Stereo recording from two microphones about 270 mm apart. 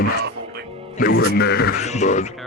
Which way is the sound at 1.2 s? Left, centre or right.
Left.